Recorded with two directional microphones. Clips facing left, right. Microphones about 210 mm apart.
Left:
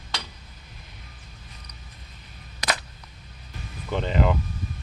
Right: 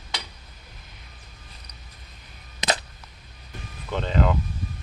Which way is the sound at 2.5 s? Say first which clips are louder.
Right 3 dB; 25° right (ahead or behind).